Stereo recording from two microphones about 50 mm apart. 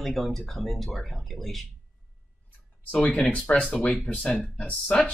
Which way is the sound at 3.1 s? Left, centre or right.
Left.